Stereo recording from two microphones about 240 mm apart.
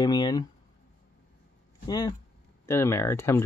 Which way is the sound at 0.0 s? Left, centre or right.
Centre.